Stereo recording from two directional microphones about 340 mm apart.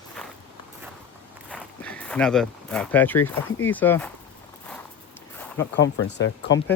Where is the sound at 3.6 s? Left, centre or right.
Centre.